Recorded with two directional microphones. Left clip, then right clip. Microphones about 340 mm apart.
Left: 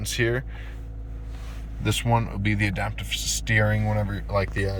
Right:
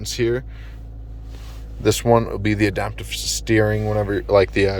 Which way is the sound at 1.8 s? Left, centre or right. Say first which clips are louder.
Right 9 dB; centre.